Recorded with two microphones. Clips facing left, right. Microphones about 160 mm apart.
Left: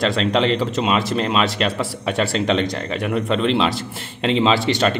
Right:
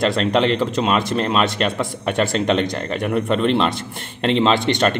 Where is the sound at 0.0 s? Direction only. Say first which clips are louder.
Right 1 dB; centre (ahead or behind).